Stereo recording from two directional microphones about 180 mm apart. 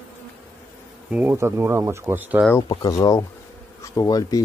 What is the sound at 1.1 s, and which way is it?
Speech, 10° right (ahead or behind).